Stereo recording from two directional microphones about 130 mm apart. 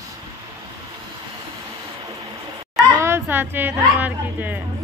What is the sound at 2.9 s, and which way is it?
A woman's voice, 20° right (ahead or behind).